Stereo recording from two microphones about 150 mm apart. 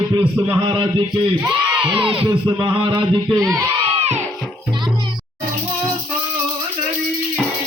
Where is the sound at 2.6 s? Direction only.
25° right (ahead or behind).